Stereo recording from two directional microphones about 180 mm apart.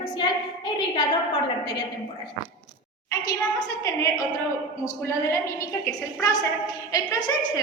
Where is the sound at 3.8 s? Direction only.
20° left (ahead or behind).